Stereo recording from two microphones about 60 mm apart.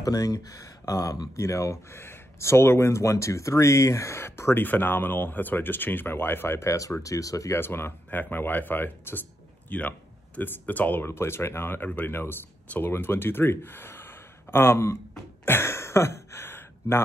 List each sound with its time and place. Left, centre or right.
0.0 s speech: left
1.3 s speech: left
7.5 s speech: left
15.4 s a sound: left